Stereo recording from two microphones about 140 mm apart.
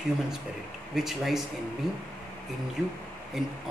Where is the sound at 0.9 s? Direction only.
Centre (ahead or behind).